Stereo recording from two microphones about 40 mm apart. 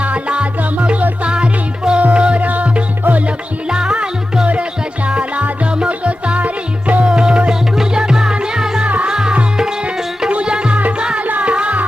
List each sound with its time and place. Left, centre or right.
0.0 s music: right
2.5 s music: right
3.7 s music: right
5.0 s music: right
7.0 s music: right
11.3 s music: right